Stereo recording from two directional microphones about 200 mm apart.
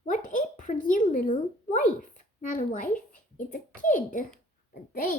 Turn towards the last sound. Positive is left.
turn(degrees=45)  # may be behind; listen again after turning